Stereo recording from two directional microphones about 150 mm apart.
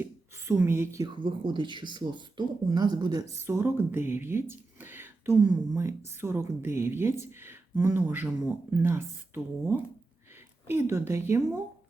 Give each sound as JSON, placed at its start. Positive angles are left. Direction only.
{"t": 0.0, "sound": "a woman's voice", "side_deg": -15}
{"t": 1.0, "sound": "speech", "side_deg": -30}
{"t": 3.4, "sound": "speech", "side_deg": -15}